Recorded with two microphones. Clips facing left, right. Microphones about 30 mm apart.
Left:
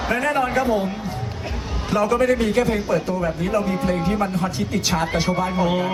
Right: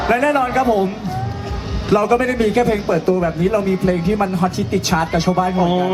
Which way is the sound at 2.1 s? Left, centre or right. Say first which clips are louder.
Right 3 dB; centre.